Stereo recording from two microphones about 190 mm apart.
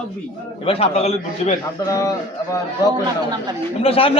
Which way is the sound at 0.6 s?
30° left (ahead or behind).